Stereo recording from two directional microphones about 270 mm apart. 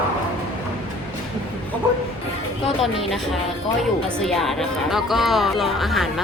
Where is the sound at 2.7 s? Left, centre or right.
Centre.